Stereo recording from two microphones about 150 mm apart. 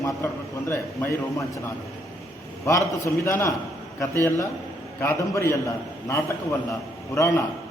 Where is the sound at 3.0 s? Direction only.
20° left (ahead or behind).